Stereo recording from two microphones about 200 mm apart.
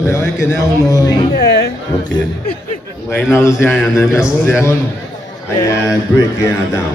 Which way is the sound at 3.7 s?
Centre (ahead or behind).